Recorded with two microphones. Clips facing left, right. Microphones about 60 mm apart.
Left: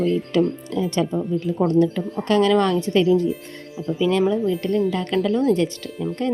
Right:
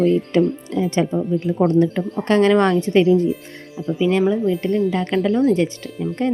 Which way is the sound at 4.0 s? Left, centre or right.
Centre.